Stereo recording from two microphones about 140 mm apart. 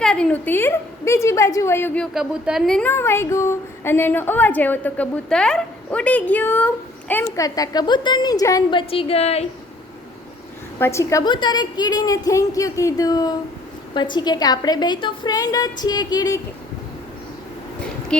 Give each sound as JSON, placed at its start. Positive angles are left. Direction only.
{"t": 0.0, "sound": "a woman's voice", "side_deg": 5}
{"t": 2.1, "sound": "a woman's voice", "side_deg": -5}
{"t": 2.9, "sound": "a woman's voice", "side_deg": 15}
{"t": 7.4, "sound": "a woman's voice", "side_deg": 25}
{"t": 8.9, "sound": "a woman's voice", "side_deg": 40}
{"t": 10.8, "sound": "a woman's voice", "side_deg": 20}
{"t": 18.1, "sound": "speech", "side_deg": 5}